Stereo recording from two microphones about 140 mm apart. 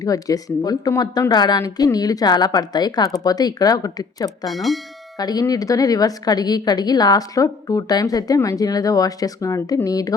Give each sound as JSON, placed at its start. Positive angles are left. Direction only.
{"t": 0.0, "sound": "a woman's voice", "side_deg": 25}
{"t": 4.4, "sound": "speech", "side_deg": 0}
{"t": 5.1, "sound": "a woman's voice", "side_deg": 25}